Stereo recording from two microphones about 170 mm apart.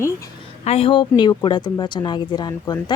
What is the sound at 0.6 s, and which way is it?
Speech, 35° left (ahead or behind).